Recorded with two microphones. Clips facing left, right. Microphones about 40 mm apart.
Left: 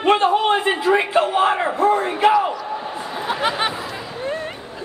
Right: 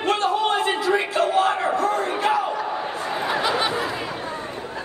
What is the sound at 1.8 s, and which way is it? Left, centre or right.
Crowd, left.